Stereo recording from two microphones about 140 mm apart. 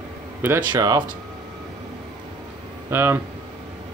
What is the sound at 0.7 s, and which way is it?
Speech, 30° right (ahead or behind).